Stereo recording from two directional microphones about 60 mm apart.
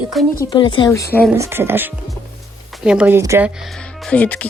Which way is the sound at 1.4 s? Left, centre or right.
Right.